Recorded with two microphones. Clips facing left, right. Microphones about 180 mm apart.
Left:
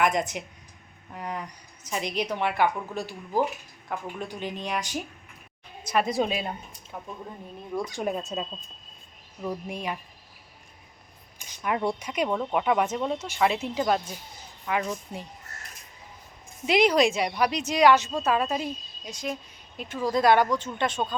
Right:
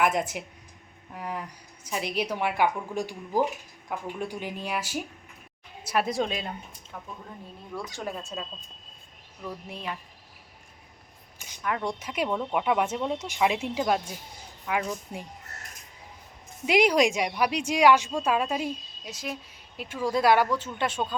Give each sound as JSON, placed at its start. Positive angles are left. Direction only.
{"t": 0.0, "sound": "a woman's voice", "side_deg": -5}
{"t": 6.1, "sound": "a woman's voice", "side_deg": 10}
{"t": 11.3, "sound": "a sound", "side_deg": 15}
{"t": 11.9, "sound": "speech", "side_deg": -5}
{"t": 12.3, "sound": "speech", "side_deg": 10}
{"t": 12.5, "sound": "a woman's voice", "side_deg": -5}
{"t": 16.6, "sound": "a woman's voice", "side_deg": -10}